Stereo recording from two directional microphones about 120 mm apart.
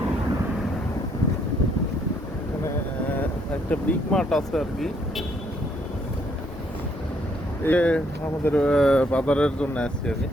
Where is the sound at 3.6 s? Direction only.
5° left (ahead or behind).